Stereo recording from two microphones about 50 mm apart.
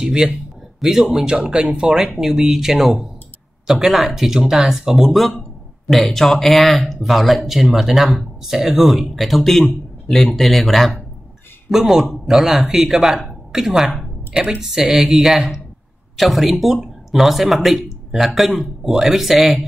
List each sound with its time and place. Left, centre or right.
0.0 s speech: centre
14.3 s speech: right
14.6 s speech: centre